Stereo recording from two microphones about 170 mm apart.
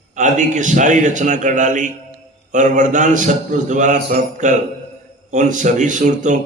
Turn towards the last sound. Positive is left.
turn(degrees=-45)  # may be behind; listen again after turning